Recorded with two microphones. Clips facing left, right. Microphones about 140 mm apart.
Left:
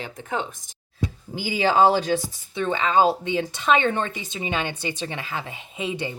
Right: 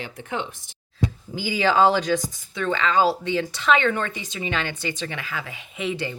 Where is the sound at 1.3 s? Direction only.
25° left (ahead or behind).